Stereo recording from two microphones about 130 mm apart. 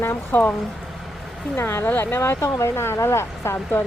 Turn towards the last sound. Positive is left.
turn(degrees=20)  # may be behind; listen again after turning